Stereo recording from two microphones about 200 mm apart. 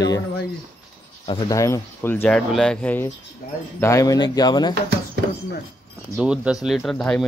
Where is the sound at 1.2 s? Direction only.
20° left (ahead or behind).